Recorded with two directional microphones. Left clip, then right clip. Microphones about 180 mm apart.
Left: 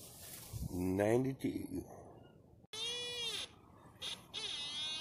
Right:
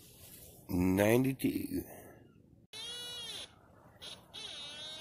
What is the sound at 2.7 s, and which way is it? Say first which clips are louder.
Goat: left 2 dB; centre (ahead or behind).